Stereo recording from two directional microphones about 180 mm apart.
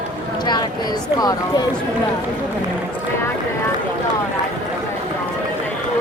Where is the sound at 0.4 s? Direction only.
25° left (ahead or behind).